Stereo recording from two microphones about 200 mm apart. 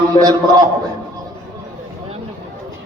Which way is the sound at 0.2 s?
20° right (ahead or behind).